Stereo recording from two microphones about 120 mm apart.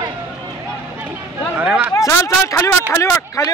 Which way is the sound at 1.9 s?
25° left (ahead or behind).